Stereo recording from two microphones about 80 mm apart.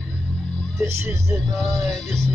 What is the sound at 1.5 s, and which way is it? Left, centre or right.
Music, centre.